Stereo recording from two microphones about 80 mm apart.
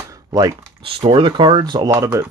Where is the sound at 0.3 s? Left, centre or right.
Right.